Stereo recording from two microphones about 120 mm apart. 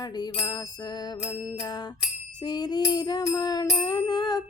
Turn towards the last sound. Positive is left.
turn(degrees=35)  # may be behind; listen again after turning